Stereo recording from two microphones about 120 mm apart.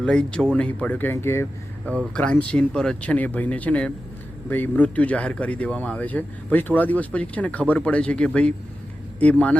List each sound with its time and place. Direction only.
0.0 s speech: 10° left (ahead or behind)
2.1 s speech: 10° left (ahead or behind)